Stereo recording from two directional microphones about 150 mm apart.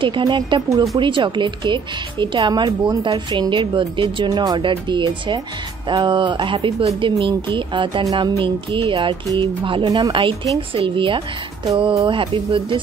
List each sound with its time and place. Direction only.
0.0 s speech: 35° right (ahead or behind)